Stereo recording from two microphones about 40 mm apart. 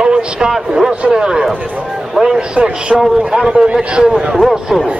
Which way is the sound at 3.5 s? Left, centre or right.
Right.